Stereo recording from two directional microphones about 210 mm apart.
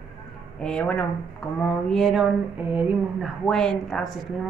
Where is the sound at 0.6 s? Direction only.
5° left (ahead or behind).